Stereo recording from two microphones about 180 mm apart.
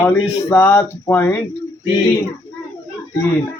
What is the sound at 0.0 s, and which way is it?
Speech, 15° left (ahead or behind).